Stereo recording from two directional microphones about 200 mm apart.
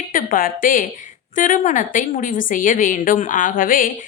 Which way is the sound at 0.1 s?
45° left (ahead or behind).